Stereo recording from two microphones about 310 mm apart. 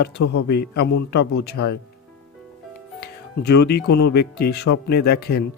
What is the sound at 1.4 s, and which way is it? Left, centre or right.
Speech, left.